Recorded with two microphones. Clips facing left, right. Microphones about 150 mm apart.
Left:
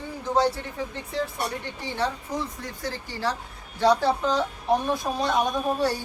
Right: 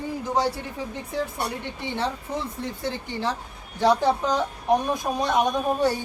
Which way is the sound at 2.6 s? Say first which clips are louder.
Right 3 dB; 25° right (ahead or behind).